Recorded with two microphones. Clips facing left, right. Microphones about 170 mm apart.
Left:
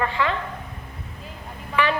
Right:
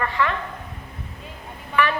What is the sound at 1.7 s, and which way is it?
Speech, 15° left (ahead or behind).